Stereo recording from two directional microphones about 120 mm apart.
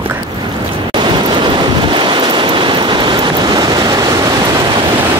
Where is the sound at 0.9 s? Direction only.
40° right (ahead or behind).